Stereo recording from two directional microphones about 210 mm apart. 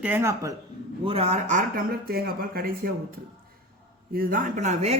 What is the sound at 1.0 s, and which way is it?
Speech, 30° right (ahead or behind).